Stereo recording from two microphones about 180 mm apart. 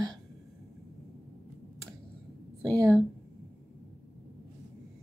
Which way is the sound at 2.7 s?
20° right (ahead or behind).